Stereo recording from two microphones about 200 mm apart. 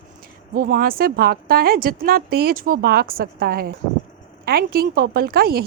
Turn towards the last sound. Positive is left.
turn(degrees=-50)  # may be behind; listen again after turning